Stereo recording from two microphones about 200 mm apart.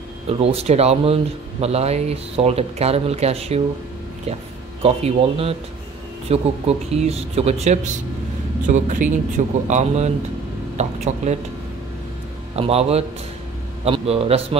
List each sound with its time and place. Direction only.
0.3 s speech: 30° right (ahead or behind)
4.8 s speech: 30° right (ahead or behind)
12.5 s speech: 30° right (ahead or behind)